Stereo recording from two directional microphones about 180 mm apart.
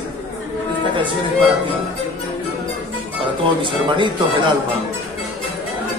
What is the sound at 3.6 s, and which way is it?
Speech, 25° right (ahead or behind).